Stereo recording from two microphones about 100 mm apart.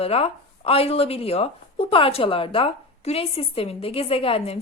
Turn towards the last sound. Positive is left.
turn(degrees=75)  # may be behind; listen again after turning